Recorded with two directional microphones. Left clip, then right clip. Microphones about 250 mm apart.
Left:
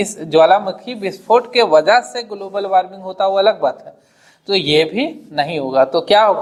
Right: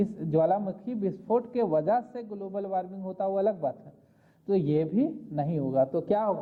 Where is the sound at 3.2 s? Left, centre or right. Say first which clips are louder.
Left 14 dB; centre.